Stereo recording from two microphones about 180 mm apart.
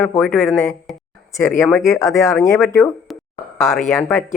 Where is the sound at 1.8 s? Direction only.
15° left (ahead or behind).